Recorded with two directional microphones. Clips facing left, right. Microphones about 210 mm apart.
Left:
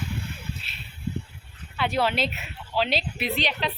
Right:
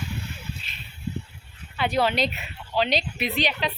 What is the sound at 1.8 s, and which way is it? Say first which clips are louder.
A woman's voice: right 2 dB; centre (ahead or behind).